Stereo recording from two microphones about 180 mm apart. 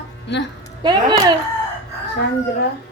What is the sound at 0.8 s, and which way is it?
Speech, 20° right (ahead or behind).